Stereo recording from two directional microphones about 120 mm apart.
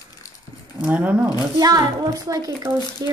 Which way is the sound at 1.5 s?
35° right (ahead or behind).